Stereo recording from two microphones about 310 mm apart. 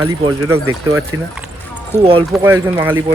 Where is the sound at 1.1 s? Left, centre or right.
Right.